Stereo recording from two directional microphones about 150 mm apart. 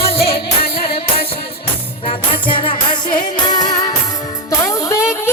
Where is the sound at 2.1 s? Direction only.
35° left (ahead or behind).